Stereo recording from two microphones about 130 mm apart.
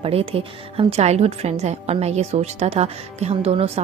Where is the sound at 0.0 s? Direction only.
45° right (ahead or behind).